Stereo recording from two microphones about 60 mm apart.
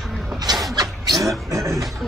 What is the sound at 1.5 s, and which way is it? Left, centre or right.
Speech, right.